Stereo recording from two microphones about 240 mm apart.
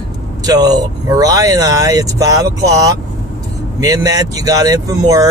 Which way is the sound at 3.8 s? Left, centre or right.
Centre.